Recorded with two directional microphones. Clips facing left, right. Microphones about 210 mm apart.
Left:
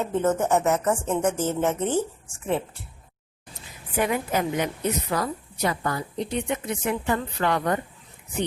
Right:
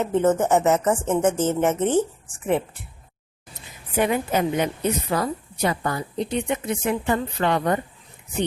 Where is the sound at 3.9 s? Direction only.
25° right (ahead or behind).